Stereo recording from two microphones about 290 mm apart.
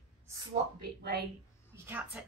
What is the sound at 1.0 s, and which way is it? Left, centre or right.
Speech, right.